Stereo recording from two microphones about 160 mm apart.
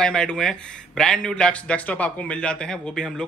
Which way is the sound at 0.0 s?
5° left (ahead or behind).